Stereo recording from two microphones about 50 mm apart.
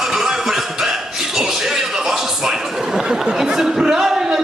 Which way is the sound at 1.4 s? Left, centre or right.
Centre.